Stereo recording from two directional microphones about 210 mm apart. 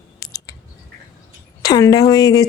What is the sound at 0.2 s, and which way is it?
Chewing, 15° left (ahead or behind).